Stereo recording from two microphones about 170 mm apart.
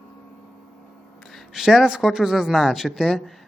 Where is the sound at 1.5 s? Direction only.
Centre (ahead or behind).